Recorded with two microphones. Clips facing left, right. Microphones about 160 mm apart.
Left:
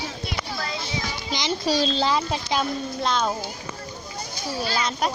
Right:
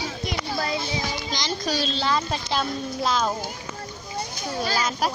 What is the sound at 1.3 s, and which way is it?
A child's voice, 20° left (ahead or behind).